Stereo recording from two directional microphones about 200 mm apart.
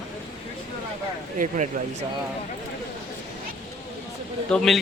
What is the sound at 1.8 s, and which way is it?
Speech, 45° right (ahead or behind).